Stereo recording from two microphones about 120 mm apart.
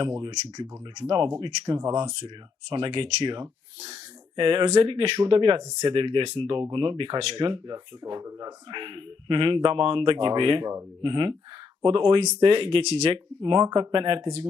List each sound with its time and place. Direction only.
0.0 s speech: 35° right (ahead or behind)
8.7 s speech: 45° right (ahead or behind)
13.4 s speech: 40° right (ahead or behind)